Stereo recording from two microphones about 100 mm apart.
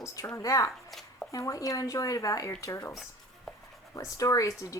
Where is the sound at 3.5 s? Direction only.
Centre (ahead or behind).